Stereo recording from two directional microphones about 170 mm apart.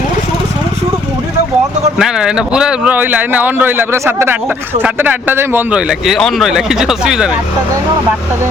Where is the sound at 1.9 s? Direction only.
5° right (ahead or behind).